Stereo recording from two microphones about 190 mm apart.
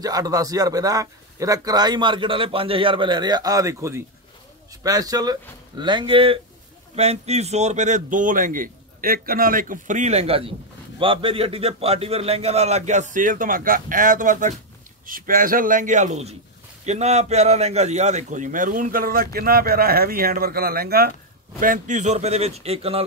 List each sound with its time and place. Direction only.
0.0 s a man's voice: 20° right (ahead or behind)